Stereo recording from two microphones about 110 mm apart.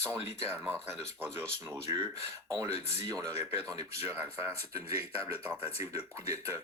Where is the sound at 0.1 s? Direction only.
20° right (ahead or behind).